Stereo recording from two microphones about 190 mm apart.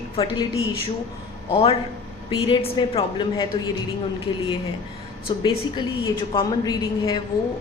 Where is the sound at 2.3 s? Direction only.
25° left (ahead or behind).